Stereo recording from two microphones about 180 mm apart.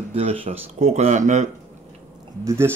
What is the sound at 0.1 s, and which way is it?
Speech, 30° right (ahead or behind).